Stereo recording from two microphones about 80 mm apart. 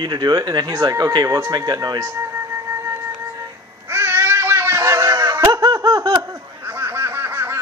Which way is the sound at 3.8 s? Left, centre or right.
Right.